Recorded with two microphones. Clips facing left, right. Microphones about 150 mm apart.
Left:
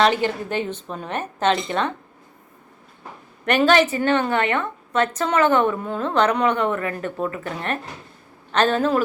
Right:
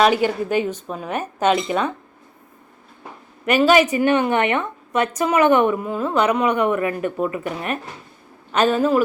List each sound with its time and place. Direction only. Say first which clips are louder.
0.0 s a woman's voice: right 2 dB; 10° right (ahead or behind)
3.4 s a woman's voice: right 2 dB; 5° right (ahead or behind)